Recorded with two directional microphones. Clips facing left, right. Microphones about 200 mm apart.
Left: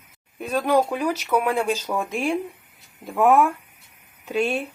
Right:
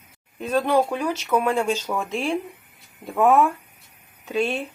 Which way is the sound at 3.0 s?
Centre (ahead or behind).